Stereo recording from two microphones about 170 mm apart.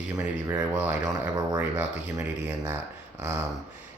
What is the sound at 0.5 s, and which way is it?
Speech, 10° right (ahead or behind).